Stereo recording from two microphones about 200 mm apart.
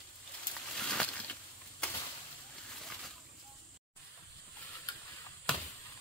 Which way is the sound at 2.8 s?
Centre (ahead or behind).